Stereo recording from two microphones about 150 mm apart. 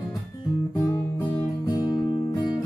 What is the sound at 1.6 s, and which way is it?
Music, 30° left (ahead or behind).